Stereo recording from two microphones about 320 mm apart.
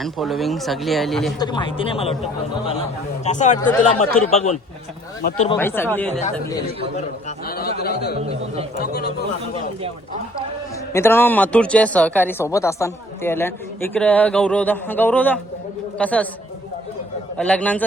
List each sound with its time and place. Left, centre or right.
0.0 s a woman's voice: centre
1.4 s speech: centre
3.2 s a man's voice: left
5.5 s speech: centre
6.9 s a man's voice: left
10.9 s a woman's voice: centre
17.3 s a woman's voice: centre